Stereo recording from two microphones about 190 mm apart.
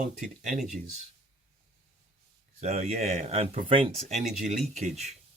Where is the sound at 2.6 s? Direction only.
35° right (ahead or behind).